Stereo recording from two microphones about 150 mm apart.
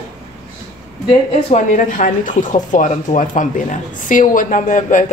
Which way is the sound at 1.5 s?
55° left (ahead or behind).